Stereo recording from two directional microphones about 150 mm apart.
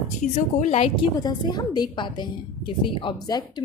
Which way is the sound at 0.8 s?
35° left (ahead or behind).